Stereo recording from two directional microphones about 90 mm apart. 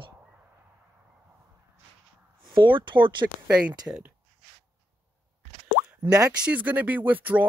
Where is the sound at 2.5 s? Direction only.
65° right (ahead or behind).